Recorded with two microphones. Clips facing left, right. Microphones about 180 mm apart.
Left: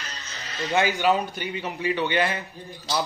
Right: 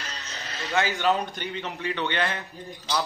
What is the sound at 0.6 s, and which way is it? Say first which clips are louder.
A man's voice: left 3 dB; 15° left (ahead or behind).